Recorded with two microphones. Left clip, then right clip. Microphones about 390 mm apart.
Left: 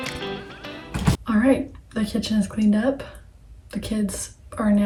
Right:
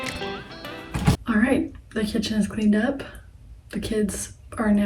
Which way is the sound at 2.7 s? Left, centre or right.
Centre.